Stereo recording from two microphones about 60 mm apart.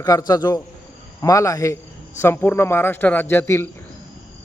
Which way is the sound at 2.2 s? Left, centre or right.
Left.